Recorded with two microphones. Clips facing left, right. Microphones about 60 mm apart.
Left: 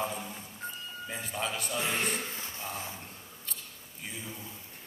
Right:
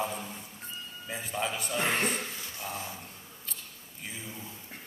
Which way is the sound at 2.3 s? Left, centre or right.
Left.